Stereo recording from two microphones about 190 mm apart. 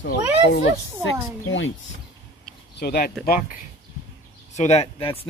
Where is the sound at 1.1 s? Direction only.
90° left.